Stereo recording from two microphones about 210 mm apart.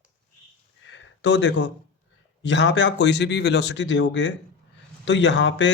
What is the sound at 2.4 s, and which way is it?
A man's voice, 60° left (ahead or behind).